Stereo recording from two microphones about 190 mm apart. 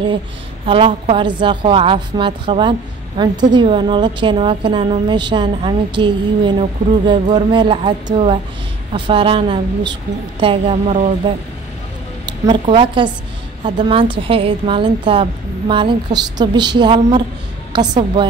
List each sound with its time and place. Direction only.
0.7 s a woman's voice: 30° right (ahead or behind)